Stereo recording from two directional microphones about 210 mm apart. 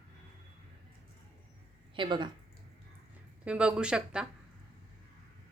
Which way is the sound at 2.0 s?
20° right (ahead or behind).